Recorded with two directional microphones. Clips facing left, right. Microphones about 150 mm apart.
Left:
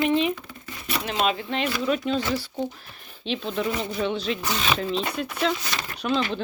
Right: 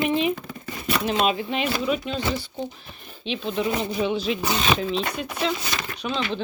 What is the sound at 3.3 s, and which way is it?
Speech, centre (ahead or behind).